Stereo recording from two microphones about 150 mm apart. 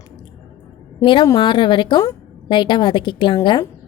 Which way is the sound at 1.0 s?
30° left (ahead or behind).